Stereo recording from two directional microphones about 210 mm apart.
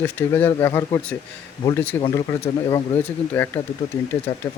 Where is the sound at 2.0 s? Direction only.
25° left (ahead or behind).